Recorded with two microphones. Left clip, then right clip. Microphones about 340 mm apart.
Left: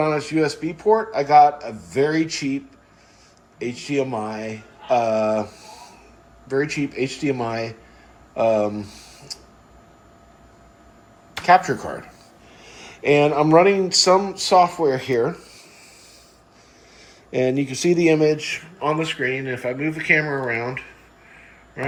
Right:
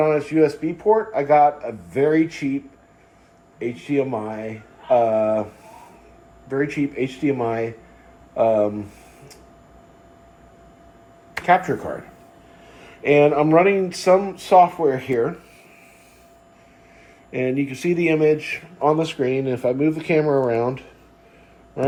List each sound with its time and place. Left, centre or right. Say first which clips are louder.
0.0 s speech: right 3 dB; centre
3.6 s speech: right 1 dB; centre
6.5 s speech: even; centre
11.4 s speech: left 2 dB; centre
12.9 s speech: right 1 dB; centre
17.3 s speech: left 2 dB; centre
18.3 s speech: even; left
18.8 s speech: right 3 dB; centre